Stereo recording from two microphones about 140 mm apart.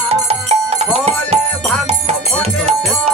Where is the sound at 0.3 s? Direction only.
45° right (ahead or behind).